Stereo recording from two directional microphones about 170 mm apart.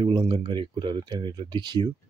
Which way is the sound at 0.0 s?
25° right (ahead or behind).